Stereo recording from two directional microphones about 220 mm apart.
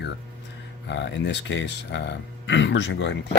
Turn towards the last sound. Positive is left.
turn(degrees=55)  # may be behind; listen again after turning